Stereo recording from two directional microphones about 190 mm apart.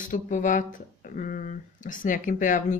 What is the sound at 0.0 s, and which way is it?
Speech, 40° left (ahead or behind).